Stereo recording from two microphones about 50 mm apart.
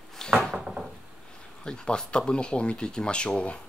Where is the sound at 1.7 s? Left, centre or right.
Centre.